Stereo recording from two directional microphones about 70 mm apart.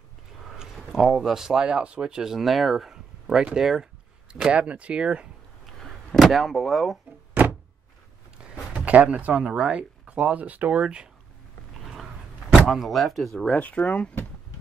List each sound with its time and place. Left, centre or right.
0.5 s speech: centre
5.8 s a sound: centre
8.4 s speech: centre
12.6 s speech: centre
13.6 s speech: left